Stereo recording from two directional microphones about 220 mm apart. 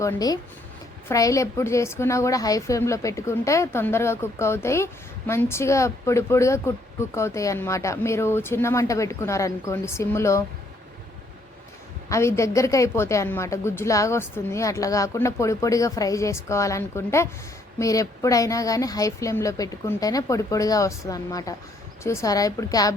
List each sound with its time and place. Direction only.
0.0 s a woman's voice: 15° left (ahead or behind)
12.0 s a woman's voice: 15° left (ahead or behind)